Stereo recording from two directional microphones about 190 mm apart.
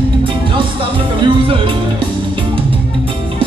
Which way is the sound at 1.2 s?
25° right (ahead or behind).